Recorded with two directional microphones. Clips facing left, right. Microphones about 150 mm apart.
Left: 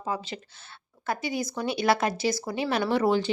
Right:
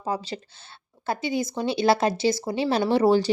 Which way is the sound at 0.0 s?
35° right (ahead or behind).